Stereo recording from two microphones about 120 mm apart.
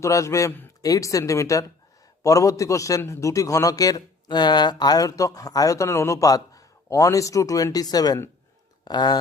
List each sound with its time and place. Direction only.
0.0 s a man's voice: 25° left (ahead or behind)